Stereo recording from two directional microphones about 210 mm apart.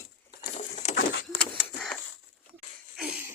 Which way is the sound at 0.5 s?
35° left (ahead or behind).